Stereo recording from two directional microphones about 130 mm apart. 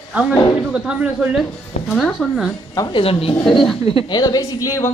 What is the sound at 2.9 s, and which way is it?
Speech, 45° left (ahead or behind).